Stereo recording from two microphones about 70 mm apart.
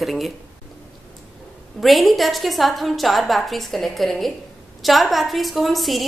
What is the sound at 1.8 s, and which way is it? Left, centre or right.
A woman's voice, centre.